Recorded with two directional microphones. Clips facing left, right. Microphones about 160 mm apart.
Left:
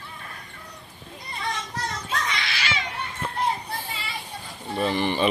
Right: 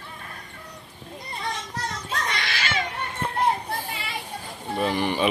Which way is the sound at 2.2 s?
45° right (ahead or behind).